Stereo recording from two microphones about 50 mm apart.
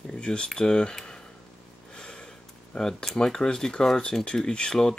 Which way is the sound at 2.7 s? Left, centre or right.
Centre.